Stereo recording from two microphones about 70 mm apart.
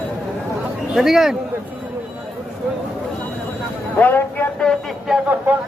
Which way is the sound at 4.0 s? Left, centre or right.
Left.